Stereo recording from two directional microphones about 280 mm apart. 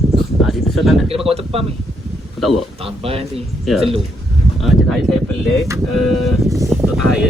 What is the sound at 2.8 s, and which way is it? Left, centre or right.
Speech, centre.